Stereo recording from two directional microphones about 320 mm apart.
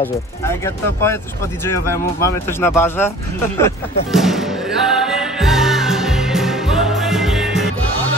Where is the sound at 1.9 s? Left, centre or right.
Centre.